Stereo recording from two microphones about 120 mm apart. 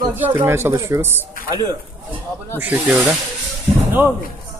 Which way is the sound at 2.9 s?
5° right (ahead or behind).